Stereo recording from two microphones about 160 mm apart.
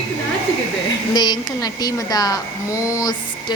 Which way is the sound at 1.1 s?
25° left (ahead or behind).